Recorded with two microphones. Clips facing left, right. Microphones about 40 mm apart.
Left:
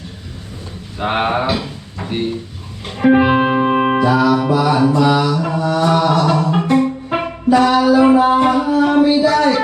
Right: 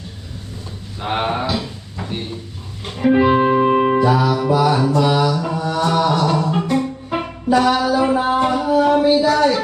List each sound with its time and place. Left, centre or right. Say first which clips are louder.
0.9 s speech: left 4 dB; left
2.8 s music: left 3 dB; centre
3.1 s music: left 1 dB; left
4.0 s music: left 3 dB; centre
4.5 s mantra: left 2 dB; centre
6.2 s music: left 3 dB; centre
7.5 s a sound: left 2 dB; centre
7.9 s a sound: left 5 dB; left